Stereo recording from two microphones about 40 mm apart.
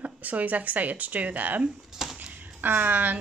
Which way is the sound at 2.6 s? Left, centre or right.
Right.